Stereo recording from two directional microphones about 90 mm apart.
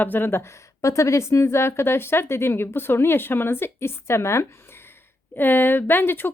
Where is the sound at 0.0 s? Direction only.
20° left (ahead or behind).